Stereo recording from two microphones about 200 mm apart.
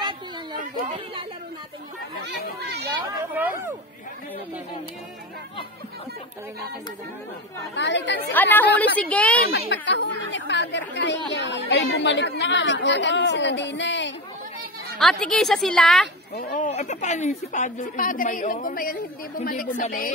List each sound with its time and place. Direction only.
0.8 s speech: 25° right (ahead or behind)
2.6 s chatter: 55° right (ahead or behind)
3.3 s speech: 10° right (ahead or behind)
7.7 s speech: 65° left (ahead or behind)
8.3 s a woman's voice: 10° left (ahead or behind)
9.7 s speech: 65° left (ahead or behind)
15.0 s a woman's voice: centre (ahead or behind)
16.3 s a woman's voice: 40° left (ahead or behind)